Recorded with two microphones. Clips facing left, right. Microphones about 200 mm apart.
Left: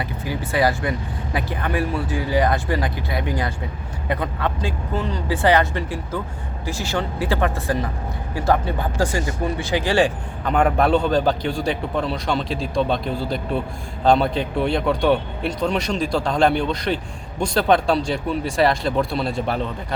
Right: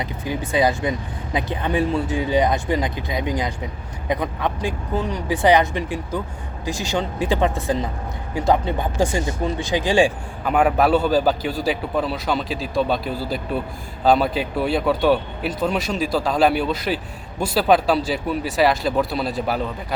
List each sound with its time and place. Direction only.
0.0 s speech: 20° right (ahead or behind); by 19.7 s 5° right (ahead or behind)